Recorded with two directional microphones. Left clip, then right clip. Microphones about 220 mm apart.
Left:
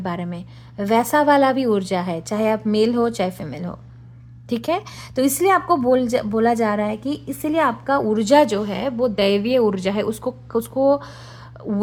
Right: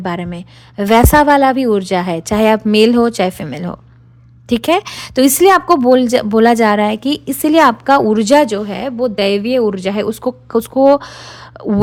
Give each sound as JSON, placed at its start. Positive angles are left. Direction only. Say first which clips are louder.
{"t": 0.0, "sound": "a woman's voice", "louder": "right 6 dB", "side_deg": -30}